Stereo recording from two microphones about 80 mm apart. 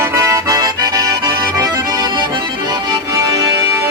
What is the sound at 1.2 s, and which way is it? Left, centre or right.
Accordion, right.